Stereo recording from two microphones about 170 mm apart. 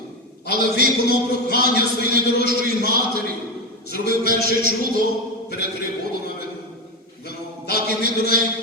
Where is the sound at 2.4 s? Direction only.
55° right (ahead or behind).